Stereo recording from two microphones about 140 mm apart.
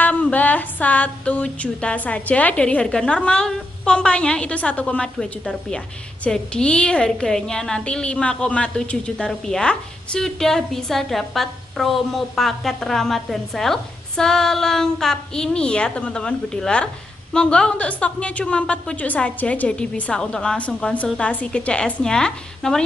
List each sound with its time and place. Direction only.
0.0 s a woman's voice: 10° left (ahead or behind)